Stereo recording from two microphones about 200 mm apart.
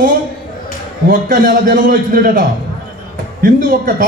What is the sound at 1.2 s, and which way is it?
Speech, 45° right (ahead or behind).